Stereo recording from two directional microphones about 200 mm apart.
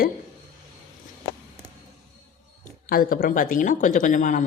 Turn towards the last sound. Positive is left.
turn(degrees=40)  # may be behind; listen again after turning